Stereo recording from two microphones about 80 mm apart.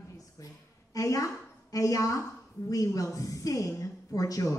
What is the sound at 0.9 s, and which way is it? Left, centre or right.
A woman's voice, left.